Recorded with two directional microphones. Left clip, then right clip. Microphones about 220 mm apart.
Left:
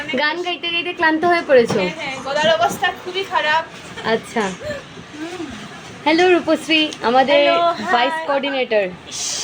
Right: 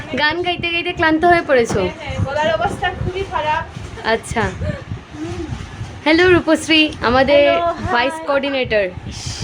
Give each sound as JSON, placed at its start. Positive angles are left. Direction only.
{"t": 0.2, "sound": "a woman's voice", "side_deg": -10}
{"t": 4.0, "sound": "a woman's voice", "side_deg": -10}
{"t": 6.1, "sound": "a woman's voice", "side_deg": -15}